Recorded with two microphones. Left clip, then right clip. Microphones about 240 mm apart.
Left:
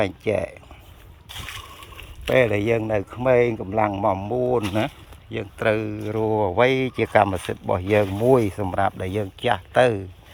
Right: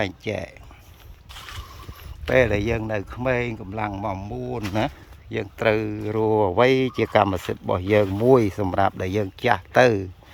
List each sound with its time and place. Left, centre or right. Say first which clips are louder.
0.0 s speech: left 4 dB; centre
1.3 s boat: left 4 dB; left
2.3 s speech: left 1 dB; right; by 4.6 s centre
5.3 s speech: right 1 dB; centre